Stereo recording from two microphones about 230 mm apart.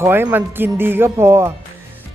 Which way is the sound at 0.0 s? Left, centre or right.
Centre.